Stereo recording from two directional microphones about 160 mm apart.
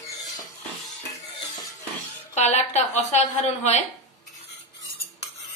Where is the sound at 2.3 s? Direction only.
45° left (ahead or behind).